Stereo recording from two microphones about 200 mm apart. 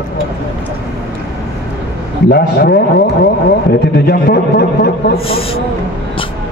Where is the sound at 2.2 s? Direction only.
50° left (ahead or behind).